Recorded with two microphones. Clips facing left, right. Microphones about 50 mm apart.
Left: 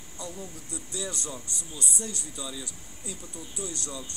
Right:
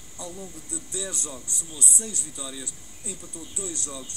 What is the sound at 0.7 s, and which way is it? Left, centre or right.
Speech, right.